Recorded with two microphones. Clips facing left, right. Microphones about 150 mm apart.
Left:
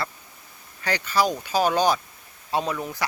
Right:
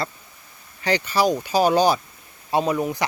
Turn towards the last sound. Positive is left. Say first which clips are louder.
# right 5 dB
turn(degrees=-15)  # may be behind; listen again after turning